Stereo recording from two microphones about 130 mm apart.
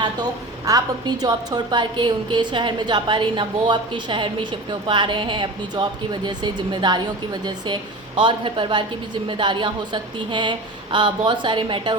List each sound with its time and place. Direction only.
0.0 s a woman's voice: 30° right (ahead or behind)